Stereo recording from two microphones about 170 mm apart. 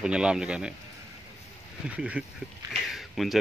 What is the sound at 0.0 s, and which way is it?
Speech, 5° right (ahead or behind).